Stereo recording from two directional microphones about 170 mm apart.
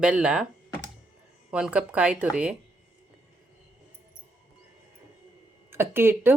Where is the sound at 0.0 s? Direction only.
5° right (ahead or behind).